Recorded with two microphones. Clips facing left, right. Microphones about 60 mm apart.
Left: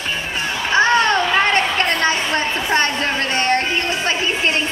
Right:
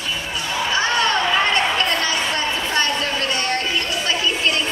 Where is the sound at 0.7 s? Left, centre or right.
Left.